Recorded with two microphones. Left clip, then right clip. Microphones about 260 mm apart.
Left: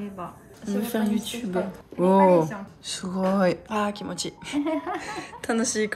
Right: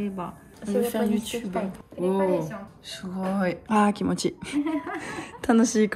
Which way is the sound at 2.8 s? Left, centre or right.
Centre.